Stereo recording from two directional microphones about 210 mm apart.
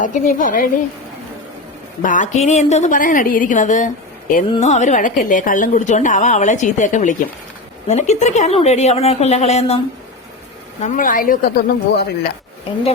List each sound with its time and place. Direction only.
0.0 s a woman's voice: 40° left (ahead or behind)
2.0 s a woman's voice: 35° left (ahead or behind)